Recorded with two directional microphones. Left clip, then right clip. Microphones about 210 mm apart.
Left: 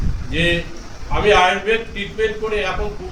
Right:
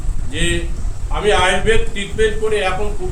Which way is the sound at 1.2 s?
15° right (ahead or behind).